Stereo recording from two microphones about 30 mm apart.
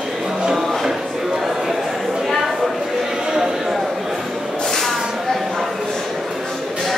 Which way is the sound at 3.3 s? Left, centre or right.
Centre.